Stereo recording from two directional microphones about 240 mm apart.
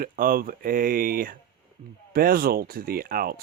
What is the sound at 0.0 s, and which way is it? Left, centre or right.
Speech, right.